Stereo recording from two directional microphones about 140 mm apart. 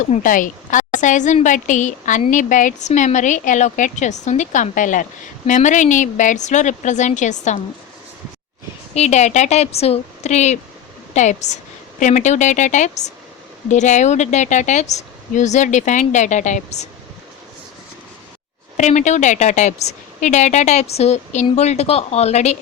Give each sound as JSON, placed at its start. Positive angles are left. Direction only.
{"t": 0.0, "sound": "speech", "side_deg": 65}
{"t": 9.0, "sound": "a woman's voice", "side_deg": 55}
{"t": 18.8, "sound": "speech", "side_deg": 60}